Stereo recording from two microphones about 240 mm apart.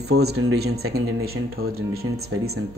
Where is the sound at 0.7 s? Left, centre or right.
Right.